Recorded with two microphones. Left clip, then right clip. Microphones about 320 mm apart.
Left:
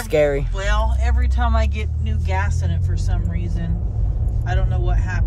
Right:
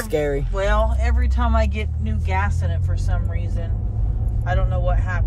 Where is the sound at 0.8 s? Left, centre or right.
Right.